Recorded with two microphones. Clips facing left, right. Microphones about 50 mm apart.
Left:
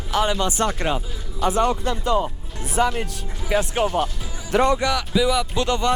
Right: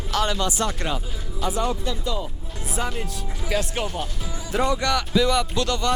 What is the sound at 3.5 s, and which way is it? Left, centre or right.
Speech, centre.